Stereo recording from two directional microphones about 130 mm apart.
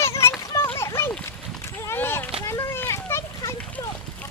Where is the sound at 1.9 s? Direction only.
20° left (ahead or behind).